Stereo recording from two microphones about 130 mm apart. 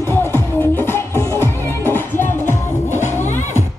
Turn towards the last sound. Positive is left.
turn(degrees=20)  # may be behind; listen again after turning